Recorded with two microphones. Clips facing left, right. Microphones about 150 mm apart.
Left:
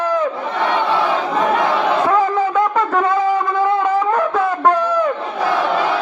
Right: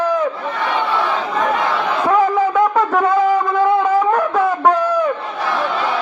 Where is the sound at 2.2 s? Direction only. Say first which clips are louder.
Right 2 dB; 5° right (ahead or behind).